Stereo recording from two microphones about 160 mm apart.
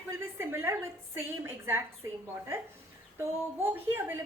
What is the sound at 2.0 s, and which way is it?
A woman's voice, 20° right (ahead or behind).